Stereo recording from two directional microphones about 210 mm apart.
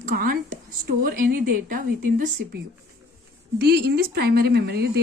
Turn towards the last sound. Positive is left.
turn(degrees=-50)  # may be behind; listen again after turning